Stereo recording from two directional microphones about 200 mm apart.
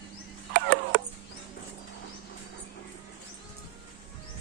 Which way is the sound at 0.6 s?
60° right (ahead or behind).